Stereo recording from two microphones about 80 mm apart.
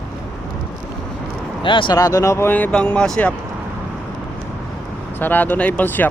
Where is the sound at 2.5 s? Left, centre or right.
Left.